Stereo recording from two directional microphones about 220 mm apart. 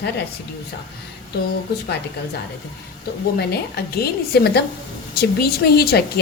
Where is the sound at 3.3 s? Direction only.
45° left (ahead or behind).